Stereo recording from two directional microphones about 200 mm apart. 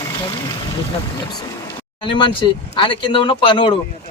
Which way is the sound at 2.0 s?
25° left (ahead or behind).